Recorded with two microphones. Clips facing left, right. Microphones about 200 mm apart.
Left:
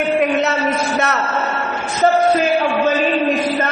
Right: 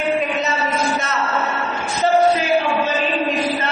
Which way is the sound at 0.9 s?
65° left (ahead or behind).